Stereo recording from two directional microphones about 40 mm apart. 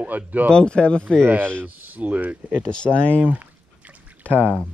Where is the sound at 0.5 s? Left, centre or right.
Left.